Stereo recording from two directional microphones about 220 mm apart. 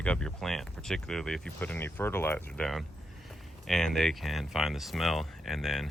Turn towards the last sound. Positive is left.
turn(degrees=0)  # may be behind; listen again after turning